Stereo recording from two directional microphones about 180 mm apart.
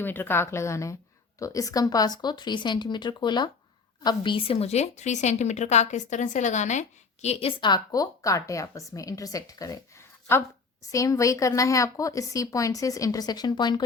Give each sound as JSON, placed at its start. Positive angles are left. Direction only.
{"t": 0.0, "sound": "a woman's voice", "side_deg": 10}
{"t": 7.6, "sound": "speech", "side_deg": 20}
{"t": 10.9, "sound": "speech", "side_deg": 15}